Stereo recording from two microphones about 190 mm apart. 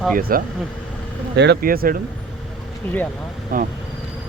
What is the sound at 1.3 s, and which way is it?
Speech, 60° right (ahead or behind).